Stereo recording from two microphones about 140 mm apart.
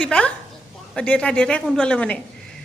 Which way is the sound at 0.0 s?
5° left (ahead or behind).